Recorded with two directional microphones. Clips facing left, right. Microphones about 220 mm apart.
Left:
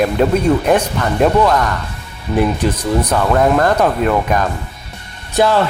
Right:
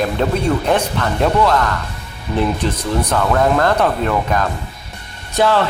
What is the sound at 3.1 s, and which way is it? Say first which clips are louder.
Speech: left 1 dB; 15° left (ahead or behind).